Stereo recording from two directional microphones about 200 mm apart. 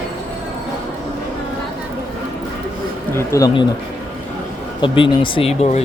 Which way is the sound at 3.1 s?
15° left (ahead or behind).